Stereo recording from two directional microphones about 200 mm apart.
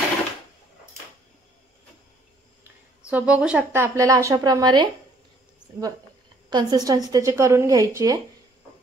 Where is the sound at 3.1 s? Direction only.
5° right (ahead or behind).